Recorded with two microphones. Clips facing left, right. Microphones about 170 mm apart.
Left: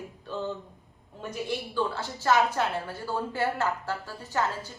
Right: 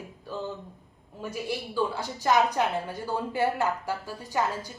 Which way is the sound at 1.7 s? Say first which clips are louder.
Right 2 dB; 15° right (ahead or behind).